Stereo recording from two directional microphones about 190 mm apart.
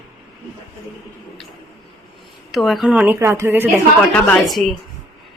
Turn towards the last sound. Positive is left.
turn(degrees=0)  # may be behind; listen again after turning